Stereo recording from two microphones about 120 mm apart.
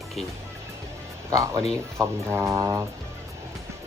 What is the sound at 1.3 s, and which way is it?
Speech, 25° right (ahead or behind).